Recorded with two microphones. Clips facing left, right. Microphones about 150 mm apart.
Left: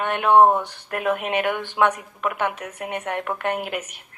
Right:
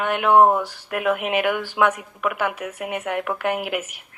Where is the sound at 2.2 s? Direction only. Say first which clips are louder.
Right 1 dB; 25° left (ahead or behind).